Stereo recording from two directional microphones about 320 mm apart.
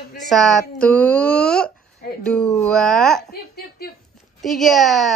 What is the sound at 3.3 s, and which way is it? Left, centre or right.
Speech, left.